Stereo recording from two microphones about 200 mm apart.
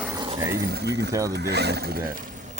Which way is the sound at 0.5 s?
55° right (ahead or behind).